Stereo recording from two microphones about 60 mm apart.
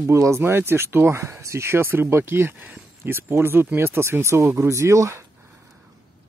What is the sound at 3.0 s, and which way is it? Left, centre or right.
Speech, right.